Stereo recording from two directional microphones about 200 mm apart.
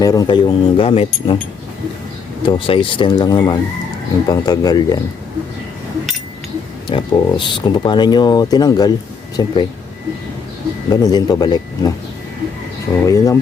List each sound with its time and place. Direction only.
0.0 s speech: 20° left (ahead or behind)
2.4 s speech: 25° left (ahead or behind)
6.8 s speech: 25° left (ahead or behind)
10.8 s speech: 20° left (ahead or behind)
13.1 s speech: 15° left (ahead or behind)